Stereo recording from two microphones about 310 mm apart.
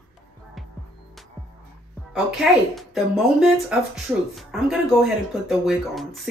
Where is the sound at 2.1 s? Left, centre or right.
Centre.